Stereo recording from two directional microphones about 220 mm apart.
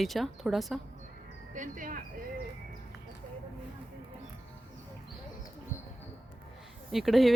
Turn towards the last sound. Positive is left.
turn(degrees=0)  # may be behind; listen again after turning